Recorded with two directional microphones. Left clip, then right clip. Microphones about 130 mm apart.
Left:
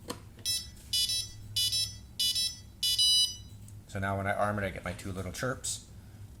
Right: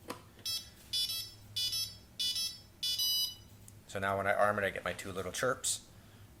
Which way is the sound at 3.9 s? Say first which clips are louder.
Right 1 dB; centre (ahead or behind).